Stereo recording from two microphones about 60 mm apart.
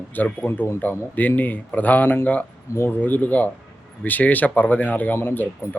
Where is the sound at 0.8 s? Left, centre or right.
Left.